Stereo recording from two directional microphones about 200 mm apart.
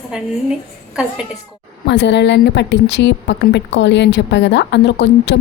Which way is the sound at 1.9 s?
60° left (ahead or behind).